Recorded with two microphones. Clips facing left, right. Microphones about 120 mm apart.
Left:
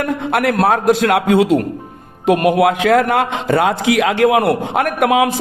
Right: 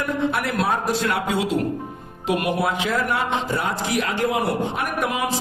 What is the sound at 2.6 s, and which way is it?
A man's voice, 70° left (ahead or behind).